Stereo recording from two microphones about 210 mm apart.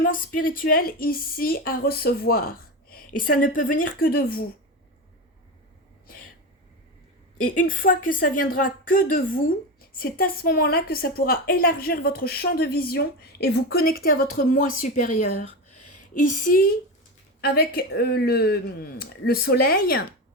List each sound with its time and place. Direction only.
0.0 s a woman's voice: 40° left (ahead or behind)
7.4 s a woman's voice: 40° left (ahead or behind)